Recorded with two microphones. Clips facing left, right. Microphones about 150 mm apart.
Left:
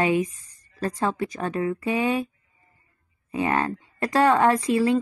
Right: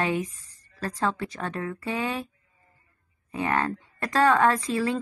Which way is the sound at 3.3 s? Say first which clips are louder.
Left 2 dB; 15° left (ahead or behind).